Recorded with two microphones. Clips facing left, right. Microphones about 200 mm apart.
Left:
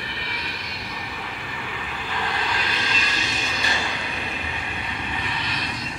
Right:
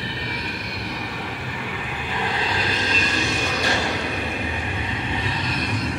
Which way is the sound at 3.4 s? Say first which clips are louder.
Right 5 dB; 60° right (ahead or behind).